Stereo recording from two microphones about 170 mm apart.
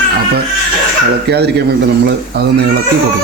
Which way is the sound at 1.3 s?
80° right.